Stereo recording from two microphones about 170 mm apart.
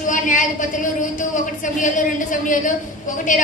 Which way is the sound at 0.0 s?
50° left (ahead or behind).